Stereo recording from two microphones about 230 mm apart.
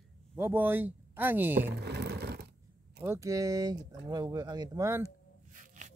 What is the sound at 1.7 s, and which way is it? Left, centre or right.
Sewing machine, right.